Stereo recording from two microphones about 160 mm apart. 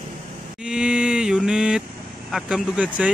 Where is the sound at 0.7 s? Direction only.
5° right (ahead or behind).